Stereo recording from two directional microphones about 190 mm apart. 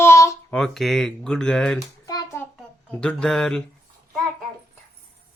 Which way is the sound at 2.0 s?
15° left (ahead or behind).